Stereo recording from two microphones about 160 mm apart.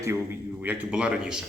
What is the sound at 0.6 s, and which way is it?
Speech, 5° right (ahead or behind).